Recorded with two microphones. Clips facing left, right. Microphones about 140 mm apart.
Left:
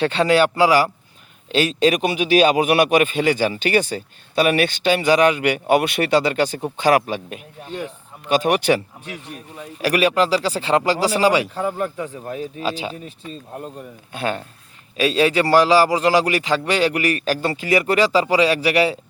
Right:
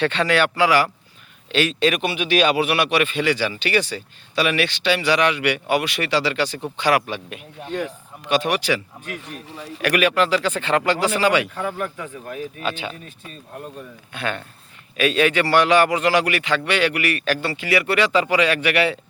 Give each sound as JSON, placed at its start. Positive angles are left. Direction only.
{"t": 0.1, "sound": "speech", "side_deg": 35}
{"t": 9.3, "sound": "speech", "side_deg": -90}
{"t": 9.8, "sound": "speech", "side_deg": 30}